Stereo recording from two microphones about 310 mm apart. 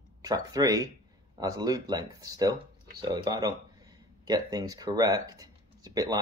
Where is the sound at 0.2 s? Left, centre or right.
Centre.